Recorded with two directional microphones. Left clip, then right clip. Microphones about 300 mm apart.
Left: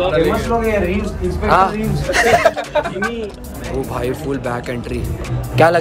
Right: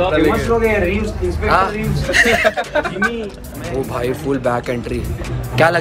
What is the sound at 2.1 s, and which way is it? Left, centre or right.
Speech, left.